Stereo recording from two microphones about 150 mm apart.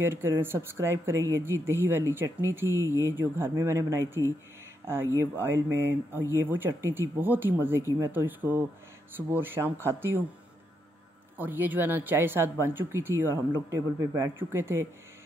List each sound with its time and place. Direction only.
0.0 s speech: 15° right (ahead or behind)
11.3 s speech: 10° right (ahead or behind)